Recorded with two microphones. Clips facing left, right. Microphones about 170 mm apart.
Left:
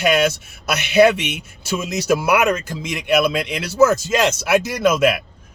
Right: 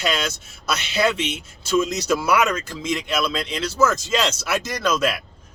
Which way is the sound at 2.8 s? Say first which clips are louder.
Left 6 dB; 15° left (ahead or behind).